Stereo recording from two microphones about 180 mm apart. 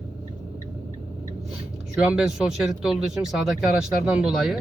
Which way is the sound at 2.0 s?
5° right (ahead or behind).